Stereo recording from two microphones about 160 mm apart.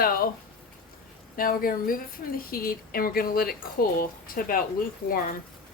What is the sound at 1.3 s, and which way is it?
A woman's voice, 65° left (ahead or behind).